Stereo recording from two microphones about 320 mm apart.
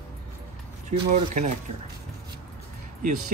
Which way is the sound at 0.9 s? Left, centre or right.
Right.